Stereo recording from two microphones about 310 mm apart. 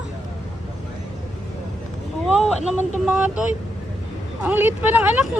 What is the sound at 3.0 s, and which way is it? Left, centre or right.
Speech, centre.